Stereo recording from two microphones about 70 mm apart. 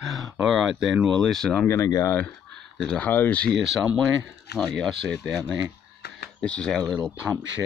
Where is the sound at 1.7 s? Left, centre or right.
Left.